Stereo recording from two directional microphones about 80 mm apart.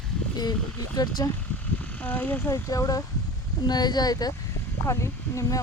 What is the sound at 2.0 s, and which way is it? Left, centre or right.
Speech, left.